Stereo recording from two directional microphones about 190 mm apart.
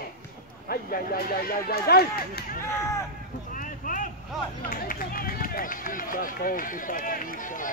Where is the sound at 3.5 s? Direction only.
45° left (ahead or behind).